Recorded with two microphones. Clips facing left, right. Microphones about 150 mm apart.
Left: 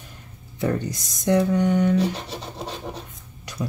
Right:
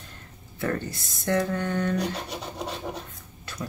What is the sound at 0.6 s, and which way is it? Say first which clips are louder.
Speech: left 4 dB; 15° left (ahead or behind).